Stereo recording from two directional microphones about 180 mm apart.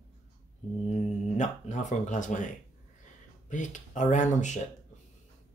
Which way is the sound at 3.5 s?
45° left (ahead or behind).